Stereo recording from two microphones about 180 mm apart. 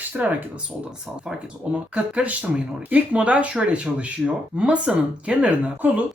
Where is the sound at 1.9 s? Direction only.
5° right (ahead or behind).